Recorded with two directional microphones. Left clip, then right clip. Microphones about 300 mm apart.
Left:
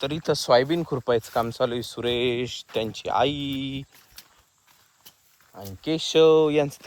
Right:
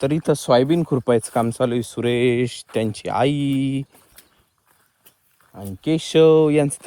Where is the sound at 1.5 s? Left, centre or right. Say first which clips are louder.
Right 4 dB; right.